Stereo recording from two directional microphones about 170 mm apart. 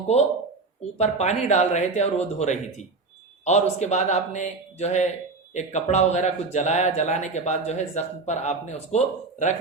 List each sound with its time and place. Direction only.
0.9 s speech: 40° left (ahead or behind)